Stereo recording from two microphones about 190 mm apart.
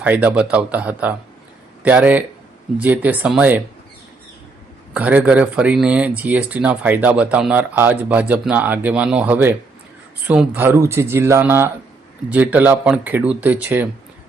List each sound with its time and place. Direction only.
0.0 s speech: 10° right (ahead or behind)
4.9 s speech: 10° right (ahead or behind)